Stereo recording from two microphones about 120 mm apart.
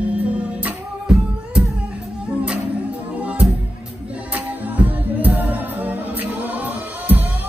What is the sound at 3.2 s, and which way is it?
Music, 10° right (ahead or behind).